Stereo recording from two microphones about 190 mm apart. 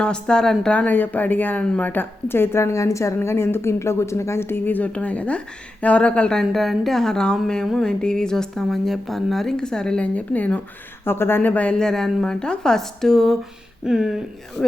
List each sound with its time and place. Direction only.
0.0 s a woman's voice: 5° left (ahead or behind)